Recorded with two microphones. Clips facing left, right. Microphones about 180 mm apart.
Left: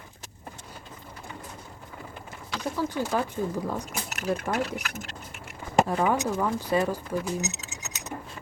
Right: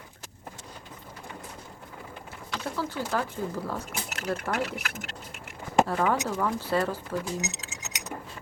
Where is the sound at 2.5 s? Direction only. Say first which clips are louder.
Left 3 dB; 15° left (ahead or behind).